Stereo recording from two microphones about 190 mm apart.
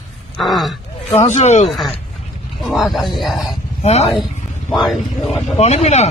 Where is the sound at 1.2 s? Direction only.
35° left (ahead or behind).